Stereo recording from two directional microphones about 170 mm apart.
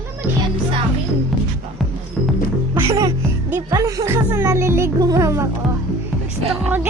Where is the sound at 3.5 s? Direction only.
20° right (ahead or behind).